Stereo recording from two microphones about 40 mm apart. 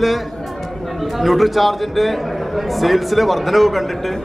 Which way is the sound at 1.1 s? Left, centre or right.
Centre.